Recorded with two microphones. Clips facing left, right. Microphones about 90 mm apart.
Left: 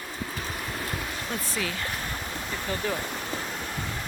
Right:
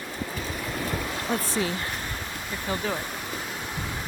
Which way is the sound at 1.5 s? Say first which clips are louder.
Right 4 dB; 30° right (ahead or behind).